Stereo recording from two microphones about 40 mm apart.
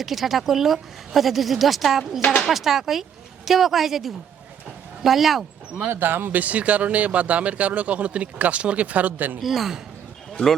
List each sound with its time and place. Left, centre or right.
0.0 s a woman's voice: centre
5.9 s speech: right
9.4 s a woman's voice: centre